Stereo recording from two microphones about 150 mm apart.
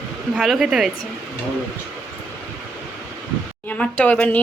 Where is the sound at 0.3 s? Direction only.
Centre (ahead or behind).